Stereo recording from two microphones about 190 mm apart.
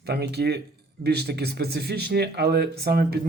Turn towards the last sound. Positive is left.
turn(degrees=-55)  # may be behind; listen again after turning